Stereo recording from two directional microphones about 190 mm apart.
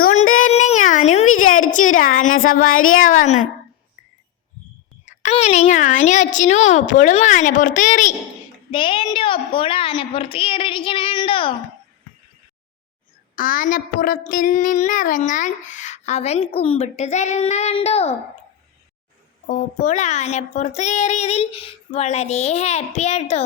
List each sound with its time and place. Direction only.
0.0 s a sound: 40° left (ahead or behind)
1.3 s a woman's voice: 45° left (ahead or behind)
2.7 s speech: 90° left
5.0 s a woman's voice: 35° left (ahead or behind)
8.7 s a woman's voice: 25° left (ahead or behind)
13.3 s a woman's voice: 45° left (ahead or behind)
19.5 s a woman's voice: 40° left (ahead or behind)